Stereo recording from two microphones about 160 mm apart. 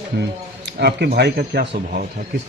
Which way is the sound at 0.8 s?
90° right.